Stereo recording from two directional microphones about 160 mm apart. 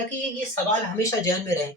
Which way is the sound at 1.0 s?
20° left (ahead or behind).